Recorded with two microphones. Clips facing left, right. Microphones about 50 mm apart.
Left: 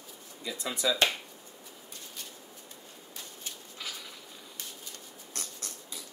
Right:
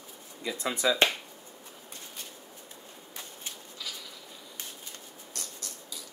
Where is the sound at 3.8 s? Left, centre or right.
Left.